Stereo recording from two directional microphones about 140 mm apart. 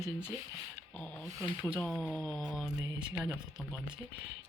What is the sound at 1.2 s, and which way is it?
Speech, 20° right (ahead or behind).